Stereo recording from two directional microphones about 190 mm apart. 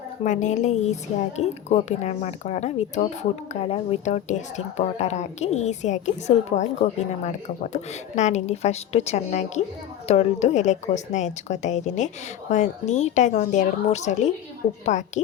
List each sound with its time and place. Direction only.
0.3 s a woman's voice: 40° left (ahead or behind)